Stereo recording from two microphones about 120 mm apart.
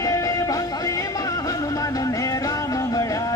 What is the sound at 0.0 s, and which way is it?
Music, 30° left (ahead or behind).